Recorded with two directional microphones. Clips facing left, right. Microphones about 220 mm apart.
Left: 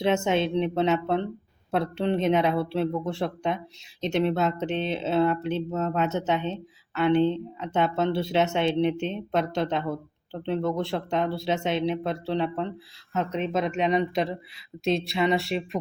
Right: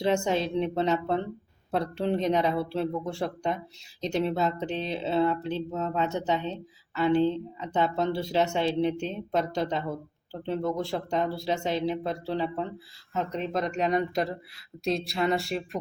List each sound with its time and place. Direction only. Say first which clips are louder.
0.0 s a woman's voice: left 2 dB; centre (ahead or behind)